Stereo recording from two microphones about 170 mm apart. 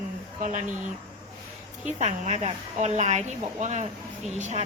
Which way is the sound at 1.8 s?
45° right (ahead or behind).